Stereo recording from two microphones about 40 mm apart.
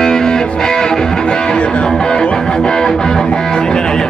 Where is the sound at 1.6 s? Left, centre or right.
Left.